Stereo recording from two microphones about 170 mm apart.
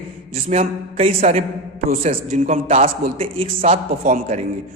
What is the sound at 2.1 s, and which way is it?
Speech, 50° right (ahead or behind).